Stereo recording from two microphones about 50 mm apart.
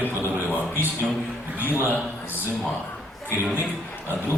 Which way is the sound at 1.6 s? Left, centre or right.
Right.